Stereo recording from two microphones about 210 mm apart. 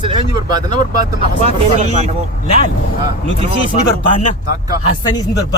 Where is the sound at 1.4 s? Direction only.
30° right (ahead or behind).